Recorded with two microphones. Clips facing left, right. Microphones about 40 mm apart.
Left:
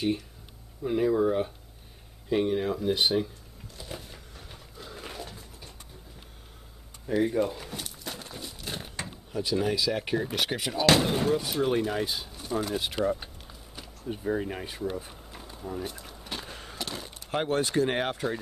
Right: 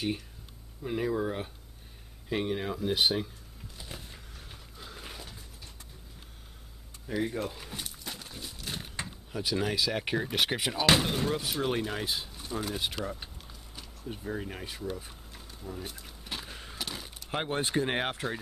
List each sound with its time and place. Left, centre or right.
0.8 s speech: centre
3.7 s a sound: centre
7.1 s crumpling: centre
9.0 s speech: centre
15.8 s a sound: centre
17.5 s speech: right